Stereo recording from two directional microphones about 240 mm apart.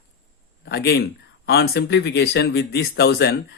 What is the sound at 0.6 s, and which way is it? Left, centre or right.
A man's voice, left.